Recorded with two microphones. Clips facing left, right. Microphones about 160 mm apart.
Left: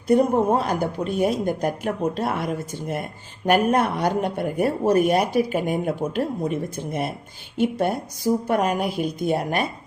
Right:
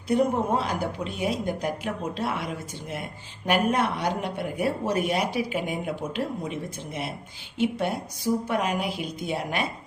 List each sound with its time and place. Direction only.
0.1 s speech: 45° left (ahead or behind)